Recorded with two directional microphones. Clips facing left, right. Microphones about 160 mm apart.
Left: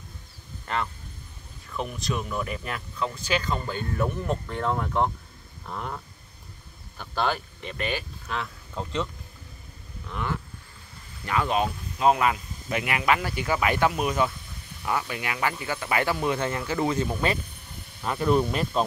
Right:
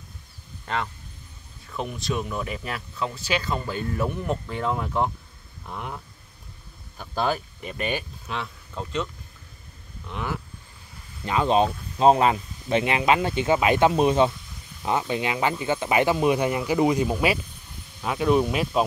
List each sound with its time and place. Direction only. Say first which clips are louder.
2.2 s speech: even; 20° right (ahead or behind)
3.0 s speech: even; 10° right (ahead or behind)
8.3 s speech: even; centre (ahead or behind)
10.1 s speech: even; 10° right (ahead or behind)
11.2 s speech: right 4 dB; 25° right (ahead or behind); by 18.9 s 5° right (ahead or behind)